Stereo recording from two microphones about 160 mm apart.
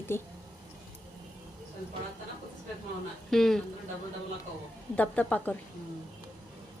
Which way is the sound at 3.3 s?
Centre (ahead or behind).